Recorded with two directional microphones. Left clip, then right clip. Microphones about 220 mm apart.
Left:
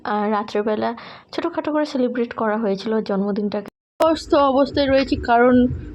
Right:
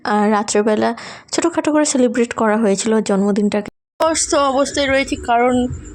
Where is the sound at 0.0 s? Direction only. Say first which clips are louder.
Right 5 dB; 45° right (ahead or behind).